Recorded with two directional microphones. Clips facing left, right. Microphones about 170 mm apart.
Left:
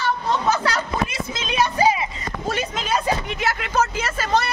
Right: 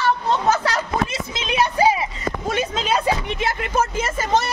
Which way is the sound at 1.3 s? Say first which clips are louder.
Right 1 dB; 20° right (ahead or behind).